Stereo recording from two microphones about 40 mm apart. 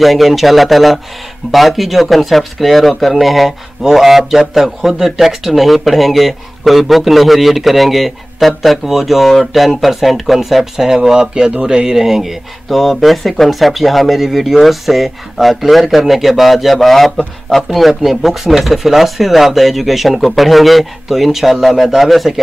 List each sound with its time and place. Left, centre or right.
0.0 s speech: centre
11.0 s speech: right; by 22.3 s centre